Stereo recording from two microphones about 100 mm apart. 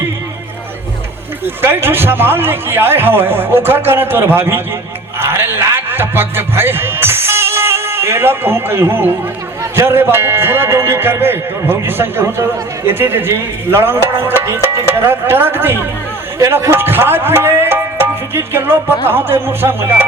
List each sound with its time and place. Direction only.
1.6 s a man's voice: 20° right (ahead or behind)
16.7 s music: 20° right (ahead or behind)
19.0 s a man's voice: 20° right (ahead or behind)